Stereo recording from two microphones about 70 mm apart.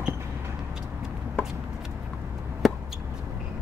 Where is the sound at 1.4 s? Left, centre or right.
Centre.